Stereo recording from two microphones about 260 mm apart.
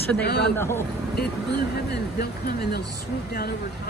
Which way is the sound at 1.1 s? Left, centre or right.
Left.